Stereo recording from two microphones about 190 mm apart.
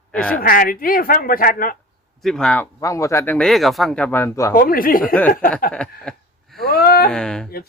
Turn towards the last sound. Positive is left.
turn(degrees=5)  # may be behind; listen again after turning